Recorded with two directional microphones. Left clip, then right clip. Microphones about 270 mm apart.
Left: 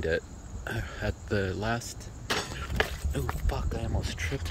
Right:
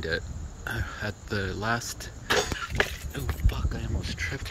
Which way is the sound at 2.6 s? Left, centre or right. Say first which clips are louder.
Right 3 dB; centre.